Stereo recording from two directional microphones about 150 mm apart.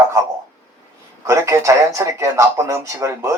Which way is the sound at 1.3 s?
20° right (ahead or behind).